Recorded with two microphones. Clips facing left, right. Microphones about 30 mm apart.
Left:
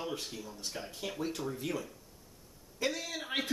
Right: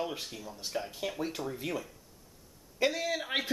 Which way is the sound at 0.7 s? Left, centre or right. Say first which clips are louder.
Right 5 dB; centre.